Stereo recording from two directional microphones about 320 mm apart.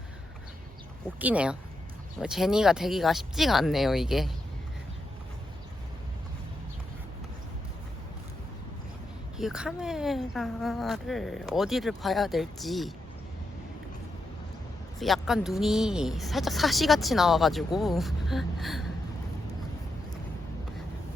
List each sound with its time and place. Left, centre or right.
1.2 s speech: centre
9.4 s speech: centre
14.9 s speech: centre